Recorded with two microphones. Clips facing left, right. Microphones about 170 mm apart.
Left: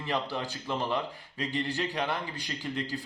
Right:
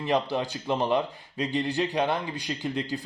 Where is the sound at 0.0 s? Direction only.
20° right (ahead or behind).